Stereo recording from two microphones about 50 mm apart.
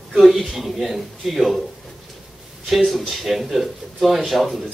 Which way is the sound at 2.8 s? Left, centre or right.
Centre.